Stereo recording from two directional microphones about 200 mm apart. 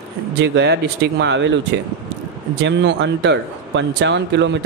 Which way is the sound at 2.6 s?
60° right (ahead or behind).